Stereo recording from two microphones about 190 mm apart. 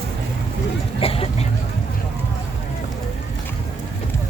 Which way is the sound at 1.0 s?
30° left (ahead or behind).